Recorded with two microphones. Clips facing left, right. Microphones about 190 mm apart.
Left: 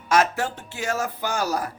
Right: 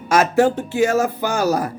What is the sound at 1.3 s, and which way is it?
Speech, 45° right (ahead or behind).